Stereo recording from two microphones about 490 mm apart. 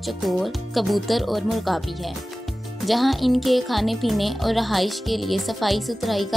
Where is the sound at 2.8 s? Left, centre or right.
Centre.